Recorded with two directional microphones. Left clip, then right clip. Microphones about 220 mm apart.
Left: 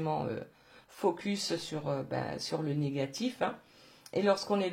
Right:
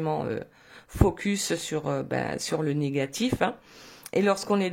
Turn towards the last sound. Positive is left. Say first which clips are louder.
# right 5 dB
turn(degrees=-40)  # may be behind; listen again after turning